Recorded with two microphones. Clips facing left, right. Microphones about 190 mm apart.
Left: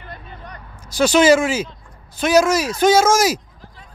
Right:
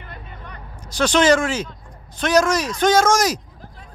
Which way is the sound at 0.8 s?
10° left (ahead or behind).